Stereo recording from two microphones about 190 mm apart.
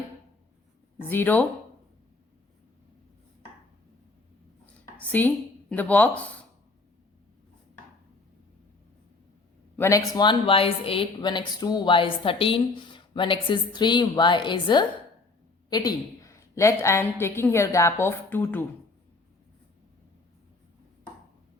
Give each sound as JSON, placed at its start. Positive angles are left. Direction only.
{"t": 1.0, "sound": "a woman's voice", "side_deg": 10}
{"t": 4.6, "sound": "a sound", "side_deg": 10}
{"t": 9.7, "sound": "a woman's voice", "side_deg": 15}